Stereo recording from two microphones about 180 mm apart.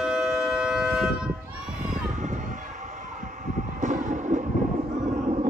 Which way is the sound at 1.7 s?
45° right (ahead or behind).